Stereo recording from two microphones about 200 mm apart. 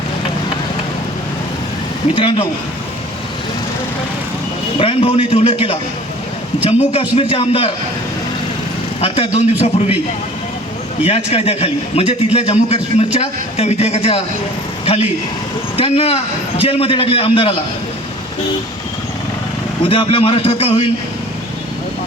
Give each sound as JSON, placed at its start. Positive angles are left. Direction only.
{"t": 2.1, "sound": "a man's voice", "side_deg": 25}
{"t": 4.8, "sound": "a man's voice", "side_deg": 30}
{"t": 9.0, "sound": "speech", "side_deg": 30}
{"t": 11.0, "sound": "a man's voice", "side_deg": 30}
{"t": 19.8, "sound": "a man's voice", "side_deg": 25}